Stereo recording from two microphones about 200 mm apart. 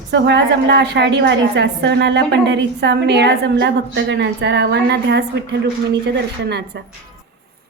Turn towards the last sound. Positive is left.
turn(degrees=-55)  # may be behind; listen again after turning